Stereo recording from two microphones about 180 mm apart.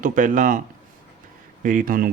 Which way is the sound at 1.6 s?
45° right (ahead or behind).